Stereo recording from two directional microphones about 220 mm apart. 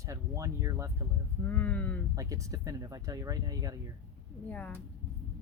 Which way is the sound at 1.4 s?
5° left (ahead or behind).